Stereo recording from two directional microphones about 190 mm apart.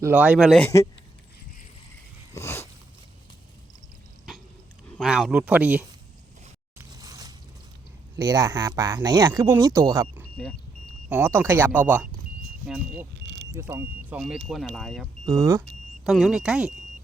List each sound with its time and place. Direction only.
0.0 s speech: 10° right (ahead or behind)
0.6 s speech: 15° left (ahead or behind)
2.3 s a sound: 15° left (ahead or behind)
4.9 s speech: centre (ahead or behind)
6.7 s a sound: 20° right (ahead or behind)
8.1 s speech: 20° right (ahead or behind); by 13.1 s 5° right (ahead or behind)
13.2 s vehicle: 60° right (ahead or behind)
13.5 s speech: 15° right (ahead or behind); by 15.0 s centre (ahead or behind)
15.3 s speech: 15° right (ahead or behind)
16.0 s speech: centre (ahead or behind)